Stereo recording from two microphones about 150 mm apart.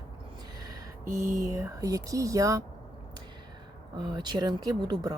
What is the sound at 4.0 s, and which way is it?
Speech, 30° right (ahead or behind).